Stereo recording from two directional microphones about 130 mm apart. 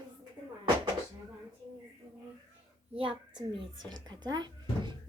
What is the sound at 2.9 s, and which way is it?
Speech, 45° right (ahead or behind).